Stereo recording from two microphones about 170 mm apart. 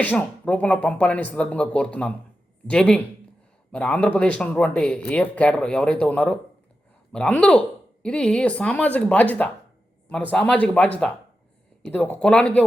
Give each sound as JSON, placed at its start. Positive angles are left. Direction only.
{"t": 0.0, "sound": "speech", "side_deg": 10}